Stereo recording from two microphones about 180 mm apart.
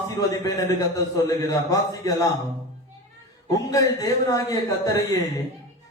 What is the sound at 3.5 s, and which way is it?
A man's voice, 20° left (ahead or behind).